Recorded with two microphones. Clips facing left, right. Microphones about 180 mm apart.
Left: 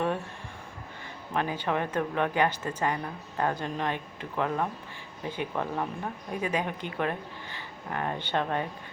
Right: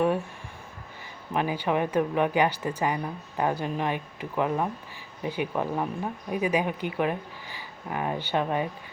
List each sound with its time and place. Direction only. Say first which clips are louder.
1.3 s speech: right 3 dB; 10° right (ahead or behind)